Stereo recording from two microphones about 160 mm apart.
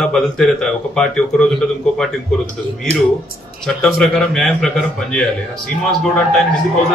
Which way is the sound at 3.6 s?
5° left (ahead or behind).